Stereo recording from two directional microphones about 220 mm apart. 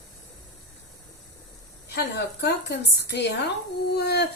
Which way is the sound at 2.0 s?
50° left (ahead or behind).